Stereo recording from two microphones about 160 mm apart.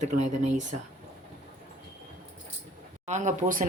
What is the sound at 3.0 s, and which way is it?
Speech, 45° right (ahead or behind).